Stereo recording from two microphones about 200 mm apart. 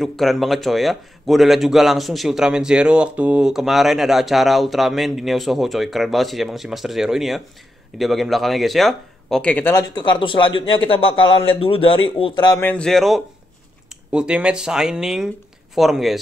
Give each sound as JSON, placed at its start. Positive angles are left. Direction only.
{"t": 0.0, "sound": "a man's voice", "side_deg": 0}
{"t": 12.5, "sound": "a man's voice", "side_deg": 10}